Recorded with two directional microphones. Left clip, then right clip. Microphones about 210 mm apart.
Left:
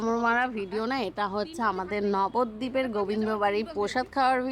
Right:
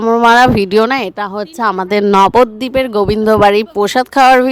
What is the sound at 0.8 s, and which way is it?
Speech, 40° right (ahead or behind).